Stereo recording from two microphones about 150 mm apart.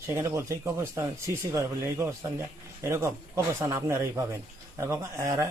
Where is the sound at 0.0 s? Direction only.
20° right (ahead or behind).